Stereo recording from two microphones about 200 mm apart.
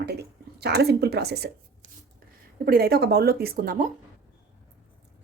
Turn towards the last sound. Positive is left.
turn(degrees=-45)  # may be behind; listen again after turning